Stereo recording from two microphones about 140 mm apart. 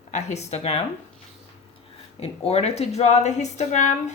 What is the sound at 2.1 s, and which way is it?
A woman's voice, 45° left (ahead or behind).